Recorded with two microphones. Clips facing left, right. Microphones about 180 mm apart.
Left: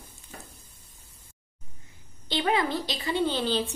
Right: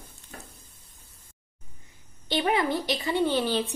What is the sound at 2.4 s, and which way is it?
A woman's voice, 20° right (ahead or behind).